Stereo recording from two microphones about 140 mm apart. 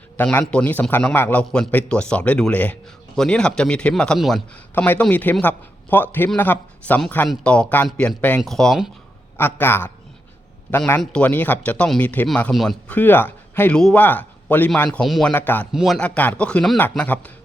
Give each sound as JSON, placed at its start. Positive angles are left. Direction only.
{"t": 0.2, "sound": "speech", "side_deg": 10}
{"t": 4.5, "sound": "speech", "side_deg": 10}
{"t": 9.4, "sound": "speech", "side_deg": 15}
{"t": 15.7, "sound": "speech", "side_deg": -5}
{"t": 16.0, "sound": "speech", "side_deg": 10}